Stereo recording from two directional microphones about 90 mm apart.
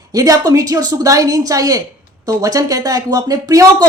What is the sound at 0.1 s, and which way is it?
A woman's voice, 40° right (ahead or behind).